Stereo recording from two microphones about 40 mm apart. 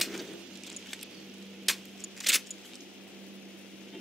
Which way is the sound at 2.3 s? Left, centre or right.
Centre.